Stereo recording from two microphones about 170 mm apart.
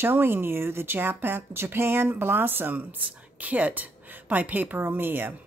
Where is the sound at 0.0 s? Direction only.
10° right (ahead or behind).